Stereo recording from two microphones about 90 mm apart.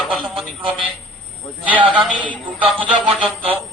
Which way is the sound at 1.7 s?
10° left (ahead or behind).